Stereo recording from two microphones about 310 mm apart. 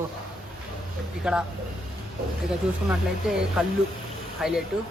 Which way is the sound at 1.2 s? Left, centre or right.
Centre.